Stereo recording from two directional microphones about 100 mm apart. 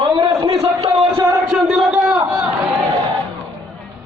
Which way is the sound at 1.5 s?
5° right (ahead or behind).